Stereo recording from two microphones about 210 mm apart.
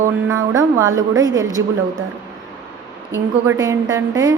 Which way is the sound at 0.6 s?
15° right (ahead or behind).